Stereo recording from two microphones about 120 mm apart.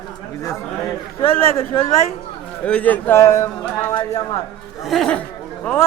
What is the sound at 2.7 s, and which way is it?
Speech, 10° left (ahead or behind).